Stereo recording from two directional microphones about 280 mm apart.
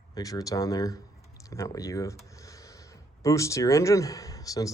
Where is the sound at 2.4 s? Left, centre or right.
Centre.